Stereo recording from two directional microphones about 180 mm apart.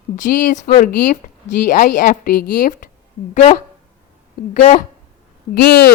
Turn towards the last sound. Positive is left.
turn(degrees=65)  # may be behind; listen again after turning